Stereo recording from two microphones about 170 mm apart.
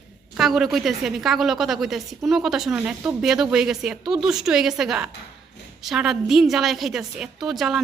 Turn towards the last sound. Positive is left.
turn(degrees=0)  # may be behind; listen again after turning